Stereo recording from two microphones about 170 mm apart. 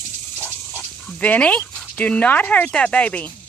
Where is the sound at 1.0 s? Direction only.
5° left (ahead or behind).